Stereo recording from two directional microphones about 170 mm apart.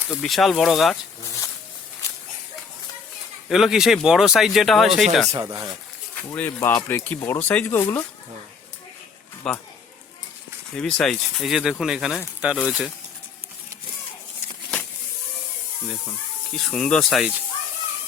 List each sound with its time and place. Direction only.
0.2 s speech: centre (ahead or behind)
3.5 s speech: centre (ahead or behind)
5.3 s speech: 20° right (ahead or behind)
6.3 s speech: 10° left (ahead or behind)
9.5 s speech: 5° left (ahead or behind)
10.8 s speech: 5° left (ahead or behind)
16.6 s speech: 5° left (ahead or behind)